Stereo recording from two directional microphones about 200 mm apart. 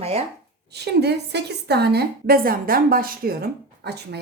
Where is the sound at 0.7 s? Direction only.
55° right (ahead or behind).